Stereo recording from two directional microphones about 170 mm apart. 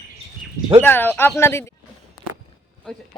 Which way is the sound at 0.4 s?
5° right (ahead or behind).